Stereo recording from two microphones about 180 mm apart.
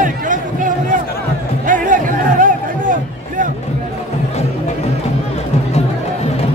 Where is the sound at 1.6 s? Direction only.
45° right (ahead or behind).